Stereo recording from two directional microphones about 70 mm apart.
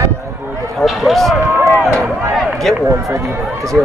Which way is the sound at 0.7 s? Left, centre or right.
Centre.